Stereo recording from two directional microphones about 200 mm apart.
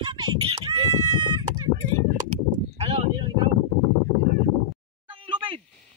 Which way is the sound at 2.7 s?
30° right (ahead or behind).